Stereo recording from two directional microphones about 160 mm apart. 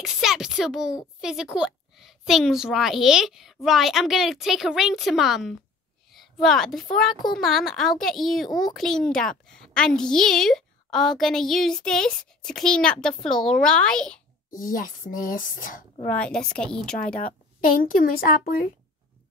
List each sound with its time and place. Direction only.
0.0 s a woman's voice: 5° right (ahead or behind)
14.5 s speech: 60° left (ahead or behind)
16.1 s a child's voice: 5° left (ahead or behind)
17.8 s speech: 60° left (ahead or behind)